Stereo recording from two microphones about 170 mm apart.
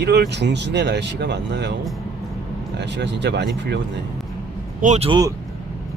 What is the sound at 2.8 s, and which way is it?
Speech, 85° right.